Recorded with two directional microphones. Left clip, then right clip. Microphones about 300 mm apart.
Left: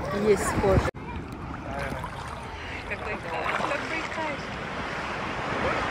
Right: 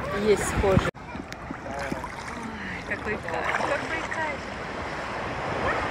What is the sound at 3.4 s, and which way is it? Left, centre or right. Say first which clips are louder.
Boat: right 1 dB; right.